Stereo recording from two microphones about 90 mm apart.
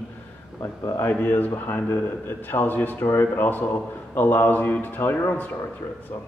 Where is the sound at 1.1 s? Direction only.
20° left (ahead or behind).